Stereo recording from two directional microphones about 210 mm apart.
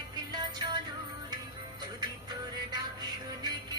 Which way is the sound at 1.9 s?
20° right (ahead or behind).